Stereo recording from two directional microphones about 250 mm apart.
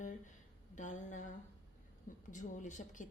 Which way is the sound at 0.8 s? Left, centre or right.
Left.